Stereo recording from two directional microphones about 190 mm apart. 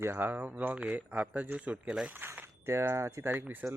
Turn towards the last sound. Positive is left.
turn(degrees=-5)  # may be behind; listen again after turning